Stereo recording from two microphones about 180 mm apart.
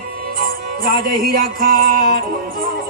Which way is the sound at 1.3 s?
55° right (ahead or behind).